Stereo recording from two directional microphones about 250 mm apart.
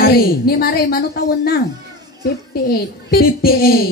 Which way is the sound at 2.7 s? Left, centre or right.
Left.